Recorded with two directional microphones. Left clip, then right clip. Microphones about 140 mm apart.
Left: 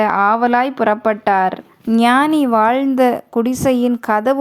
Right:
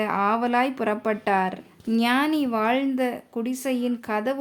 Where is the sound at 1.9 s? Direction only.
55° left (ahead or behind).